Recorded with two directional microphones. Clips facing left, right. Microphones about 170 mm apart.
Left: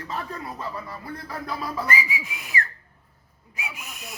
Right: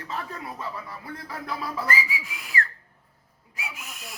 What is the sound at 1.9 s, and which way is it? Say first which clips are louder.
Whistle: left 1 dB; 20° left (ahead or behind).